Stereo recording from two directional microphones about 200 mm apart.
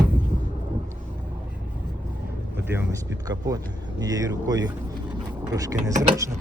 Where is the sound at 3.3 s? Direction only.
20° right (ahead or behind).